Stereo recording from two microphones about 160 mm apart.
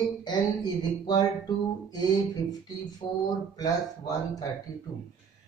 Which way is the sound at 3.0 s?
25° left (ahead or behind).